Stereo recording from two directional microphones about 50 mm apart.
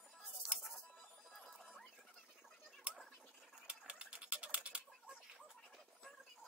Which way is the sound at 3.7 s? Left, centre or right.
Right.